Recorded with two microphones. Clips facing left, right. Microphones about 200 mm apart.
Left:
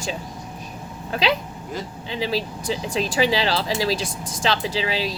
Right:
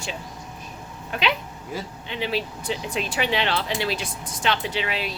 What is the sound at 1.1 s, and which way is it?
Speech, 35° left (ahead or behind).